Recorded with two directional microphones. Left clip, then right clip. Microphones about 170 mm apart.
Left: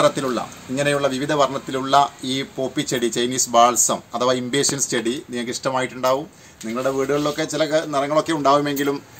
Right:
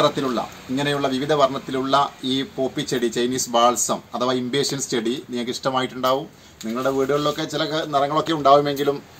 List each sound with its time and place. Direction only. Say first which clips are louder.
0.0 s a man's voice: left 1 dB; 30° left (ahead or behind)